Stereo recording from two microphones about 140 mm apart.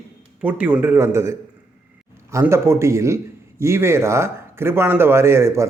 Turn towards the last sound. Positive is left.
turn(degrees=-20)  # may be behind; listen again after turning